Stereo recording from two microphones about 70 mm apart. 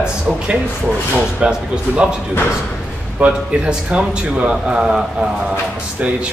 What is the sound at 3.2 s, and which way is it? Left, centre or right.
Speech, centre.